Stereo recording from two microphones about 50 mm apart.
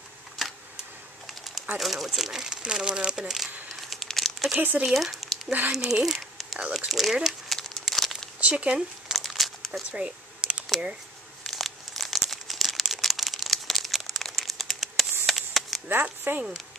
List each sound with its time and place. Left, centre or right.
0.4 s camera: centre
1.2 s a sound: centre
1.8 s speech: centre
2.6 s speech: centre
3.9 s crumpling: centre
4.6 s speech: right
4.8 s speech: centre
7.2 s crumpling: centre
8.4 s speech: right
9.1 s crumpling: centre
9.8 s a sound: centre
11.4 s crumpling: centre
15.2 s a sound: centre
15.9 s speech: right